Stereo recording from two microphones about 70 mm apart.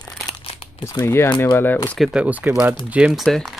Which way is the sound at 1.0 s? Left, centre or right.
Left.